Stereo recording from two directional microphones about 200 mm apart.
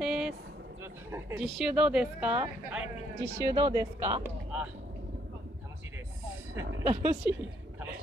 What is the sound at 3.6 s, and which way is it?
Speech, 15° right (ahead or behind).